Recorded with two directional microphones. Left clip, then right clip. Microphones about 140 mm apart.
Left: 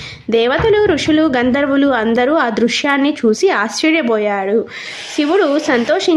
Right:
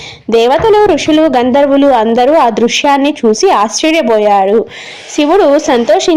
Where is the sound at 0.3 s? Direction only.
20° right (ahead or behind).